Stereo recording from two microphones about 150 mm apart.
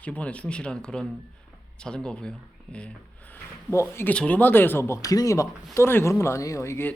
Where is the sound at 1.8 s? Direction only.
5° left (ahead or behind).